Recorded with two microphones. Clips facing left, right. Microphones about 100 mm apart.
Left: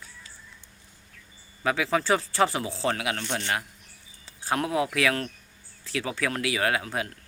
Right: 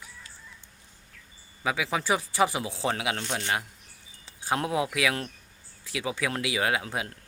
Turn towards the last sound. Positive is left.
turn(degrees=-20)  # may be behind; listen again after turning